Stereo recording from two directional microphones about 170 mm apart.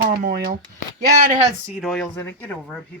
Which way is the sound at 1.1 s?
55° right (ahead or behind).